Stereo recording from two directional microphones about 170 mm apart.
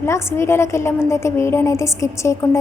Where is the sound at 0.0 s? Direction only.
15° left (ahead or behind).